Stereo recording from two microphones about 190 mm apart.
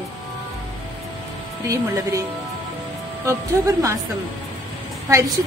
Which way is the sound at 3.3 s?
15° right (ahead or behind).